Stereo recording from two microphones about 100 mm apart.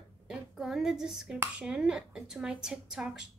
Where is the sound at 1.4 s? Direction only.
10° right (ahead or behind).